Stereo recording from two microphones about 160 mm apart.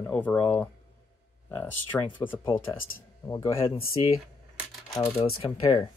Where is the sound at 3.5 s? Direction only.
35° left (ahead or behind).